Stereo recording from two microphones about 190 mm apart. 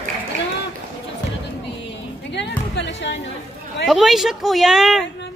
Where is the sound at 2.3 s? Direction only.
65° left (ahead or behind).